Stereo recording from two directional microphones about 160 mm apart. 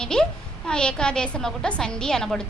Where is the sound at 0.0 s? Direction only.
5° left (ahead or behind).